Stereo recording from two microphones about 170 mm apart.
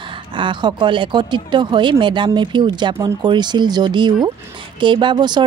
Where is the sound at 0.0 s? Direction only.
30° right (ahead or behind).